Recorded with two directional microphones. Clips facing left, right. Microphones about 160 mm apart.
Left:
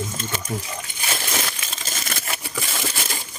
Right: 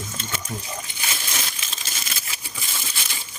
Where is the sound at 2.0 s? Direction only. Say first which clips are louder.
Left 7 dB; 60° left (ahead or behind); by 3.0 s 75° left (ahead or behind).